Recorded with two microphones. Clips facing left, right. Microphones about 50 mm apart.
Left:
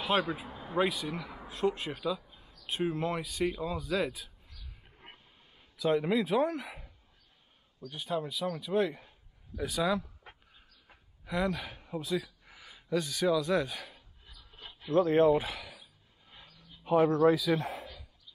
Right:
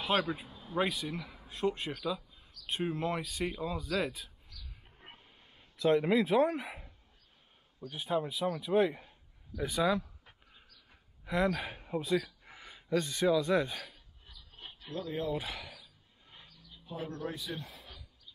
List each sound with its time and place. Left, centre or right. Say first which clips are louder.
0.0 s speech: left 1 dB; centre
0.5 s a sound: left 6 dB; left
0.7 s speech: left 2 dB; centre
5.1 s a sound: right 1 dB; centre
7.9 s speech: right 1 dB; centre
11.2 s speech: right 1 dB; centre
11.6 s speech: right 2 dB; centre
12.4 s speech: even; centre
14.9 s speech: left 13 dB; left
15.4 s speech: left 2 dB; centre
16.8 s a man's voice: left 16 dB; left